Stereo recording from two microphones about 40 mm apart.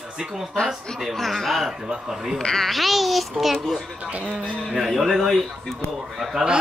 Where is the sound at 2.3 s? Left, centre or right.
Centre.